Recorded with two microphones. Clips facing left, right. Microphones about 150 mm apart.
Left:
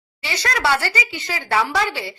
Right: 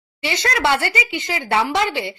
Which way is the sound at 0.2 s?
25° right (ahead or behind).